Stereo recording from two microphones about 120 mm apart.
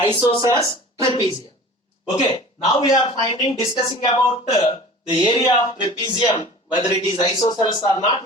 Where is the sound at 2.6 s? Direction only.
35° left (ahead or behind).